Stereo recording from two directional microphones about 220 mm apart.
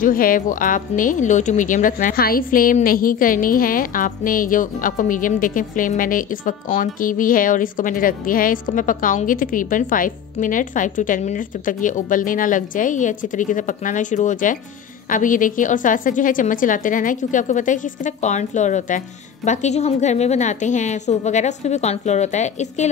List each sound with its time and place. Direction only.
0.0 s speech: 40° left (ahead or behind)